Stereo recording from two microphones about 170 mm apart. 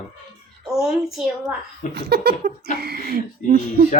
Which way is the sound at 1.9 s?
70° right (ahead or behind).